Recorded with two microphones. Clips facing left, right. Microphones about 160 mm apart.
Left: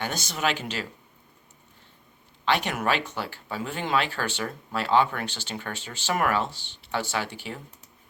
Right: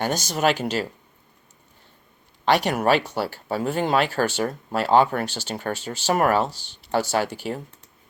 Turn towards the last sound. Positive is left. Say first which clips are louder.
# right 7 dB
turn(degrees=-40)  # may be behind; listen again after turning